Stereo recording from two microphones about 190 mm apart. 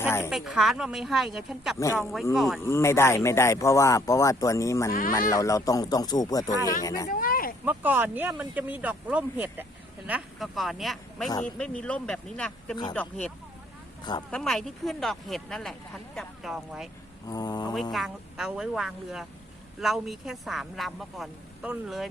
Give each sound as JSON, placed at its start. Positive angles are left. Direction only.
{"t": 0.0, "sound": "snake", "side_deg": 10}
{"t": 0.3, "sound": "speech", "side_deg": 0}
{"t": 2.6, "sound": "speech", "side_deg": 15}
{"t": 4.9, "sound": "speech", "side_deg": 50}
{"t": 5.1, "sound": "speech", "side_deg": 15}
{"t": 7.1, "sound": "a sound", "side_deg": 50}
{"t": 7.6, "sound": "speech", "side_deg": -10}
{"t": 14.0, "sound": "speech", "side_deg": 25}
{"t": 14.3, "sound": "speech", "side_deg": 5}
{"t": 17.2, "sound": "speech", "side_deg": 20}
{"t": 17.9, "sound": "speech", "side_deg": 0}